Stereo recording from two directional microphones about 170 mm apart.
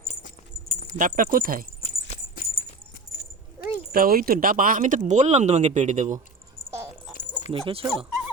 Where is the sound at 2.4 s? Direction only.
55° left (ahead or behind).